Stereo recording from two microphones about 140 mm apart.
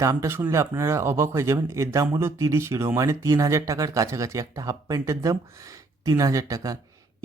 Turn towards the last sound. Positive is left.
turn(degrees=-25)  # may be behind; listen again after turning